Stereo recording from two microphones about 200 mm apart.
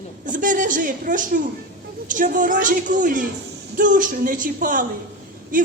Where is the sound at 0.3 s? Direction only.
40° right (ahead or behind).